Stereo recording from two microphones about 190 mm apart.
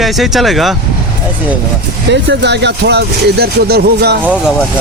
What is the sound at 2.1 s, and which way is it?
Speech, 65° right (ahead or behind).